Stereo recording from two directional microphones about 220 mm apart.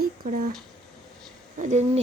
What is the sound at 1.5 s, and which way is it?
Speech, 35° right (ahead or behind).